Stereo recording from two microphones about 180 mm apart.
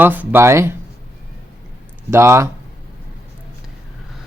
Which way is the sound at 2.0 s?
15° right (ahead or behind).